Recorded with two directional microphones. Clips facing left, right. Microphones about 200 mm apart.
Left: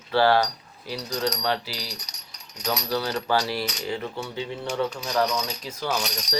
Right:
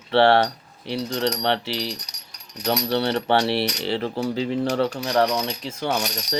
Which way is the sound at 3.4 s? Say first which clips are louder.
Right 6 dB; 70° right (ahead or behind).